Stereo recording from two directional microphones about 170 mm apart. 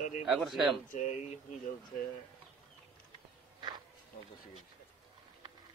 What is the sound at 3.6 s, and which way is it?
Insect, 25° right (ahead or behind).